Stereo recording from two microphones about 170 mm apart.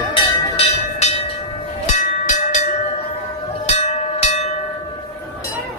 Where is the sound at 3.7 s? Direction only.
40° left (ahead or behind).